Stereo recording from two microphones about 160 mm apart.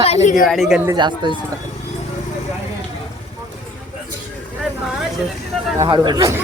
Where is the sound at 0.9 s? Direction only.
30° right (ahead or behind).